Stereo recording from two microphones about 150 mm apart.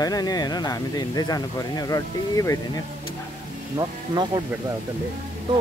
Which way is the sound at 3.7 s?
25° right (ahead or behind).